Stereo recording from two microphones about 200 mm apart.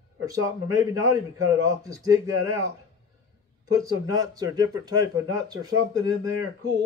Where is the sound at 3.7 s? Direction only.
15° right (ahead or behind).